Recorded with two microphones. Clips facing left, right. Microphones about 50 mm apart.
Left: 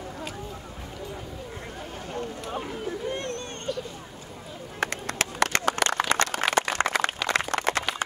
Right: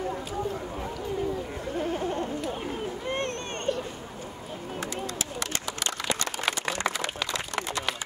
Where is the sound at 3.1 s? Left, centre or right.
Right.